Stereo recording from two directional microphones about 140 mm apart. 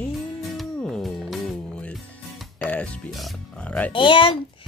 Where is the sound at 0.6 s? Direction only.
5° left (ahead or behind).